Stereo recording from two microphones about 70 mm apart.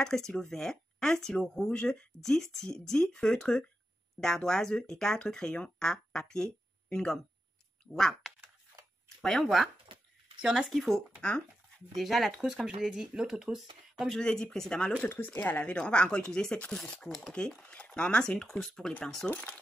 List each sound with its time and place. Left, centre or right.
0.0 s speech: centre
11.1 s speech: centre
11.9 s speech: centre
14.2 s speech: centre
15.0 s speech: left; by 19.3 s centre